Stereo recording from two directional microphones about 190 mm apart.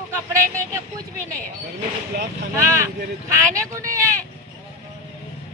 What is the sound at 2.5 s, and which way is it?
A man's voice, 15° right (ahead or behind).